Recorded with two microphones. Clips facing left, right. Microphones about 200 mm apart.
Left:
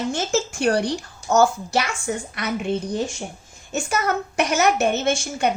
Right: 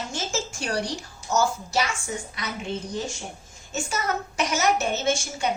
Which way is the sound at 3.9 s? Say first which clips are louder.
Left 6 dB; 60° left (ahead or behind).